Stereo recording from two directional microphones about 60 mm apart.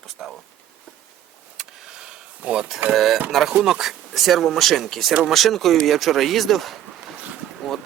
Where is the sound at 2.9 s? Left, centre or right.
Centre.